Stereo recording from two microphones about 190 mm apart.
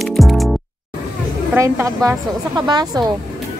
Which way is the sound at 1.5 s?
10° right (ahead or behind).